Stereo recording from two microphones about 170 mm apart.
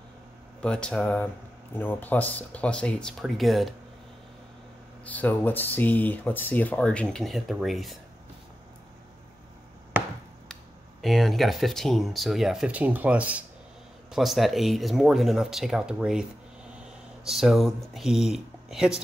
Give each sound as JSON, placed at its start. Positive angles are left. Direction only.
{"t": 0.6, "sound": "speech", "side_deg": 5}
{"t": 5.0, "sound": "speech", "side_deg": 10}
{"t": 10.5, "sound": "speech", "side_deg": 0}
{"t": 17.3, "sound": "speech", "side_deg": 0}